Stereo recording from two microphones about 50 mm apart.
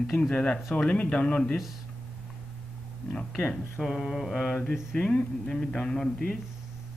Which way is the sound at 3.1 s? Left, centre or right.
Left.